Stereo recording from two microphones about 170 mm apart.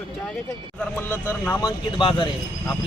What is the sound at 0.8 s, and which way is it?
Speech, 10° left (ahead or behind).